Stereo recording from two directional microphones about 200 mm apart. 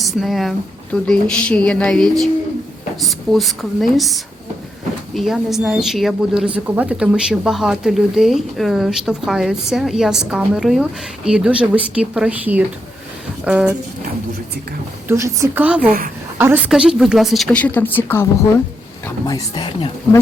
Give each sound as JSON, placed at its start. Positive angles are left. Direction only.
{"t": 0.0, "sound": "a woman's voice", "side_deg": 0}
{"t": 15.0, "sound": "a woman's voice", "side_deg": -15}
{"t": 15.9, "sound": "a woman's voice", "side_deg": -45}
{"t": 16.4, "sound": "a woman's voice", "side_deg": -10}